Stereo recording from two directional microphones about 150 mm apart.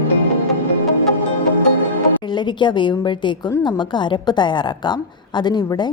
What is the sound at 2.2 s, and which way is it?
A woman's voice, 30° left (ahead or behind).